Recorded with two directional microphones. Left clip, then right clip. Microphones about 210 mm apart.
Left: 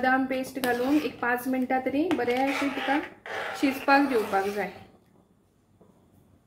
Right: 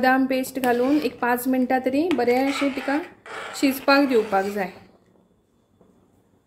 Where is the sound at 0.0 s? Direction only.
40° right (ahead or behind).